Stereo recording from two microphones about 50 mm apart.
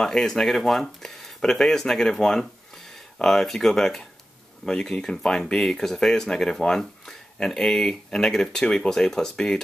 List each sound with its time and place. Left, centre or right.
0.0 s speech: centre